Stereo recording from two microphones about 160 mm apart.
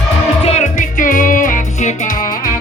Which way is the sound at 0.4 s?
45° left (ahead or behind).